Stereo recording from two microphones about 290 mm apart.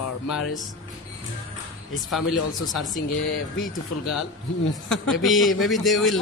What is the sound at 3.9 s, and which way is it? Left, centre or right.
Speech, left.